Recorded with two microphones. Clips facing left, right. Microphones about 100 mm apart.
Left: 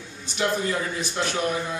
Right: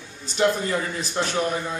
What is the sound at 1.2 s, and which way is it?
Speech, 25° right (ahead or behind).